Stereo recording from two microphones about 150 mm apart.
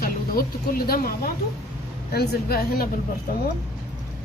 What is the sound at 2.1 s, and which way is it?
Speech, 90° left.